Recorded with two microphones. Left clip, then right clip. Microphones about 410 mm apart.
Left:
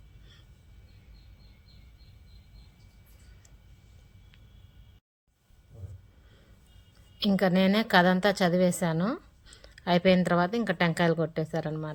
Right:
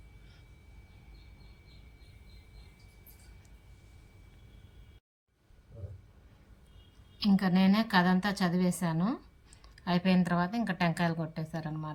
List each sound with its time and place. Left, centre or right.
7.2 s a woman's voice: centre
9.6 s a sound: centre
10.2 s a woman's voice: centre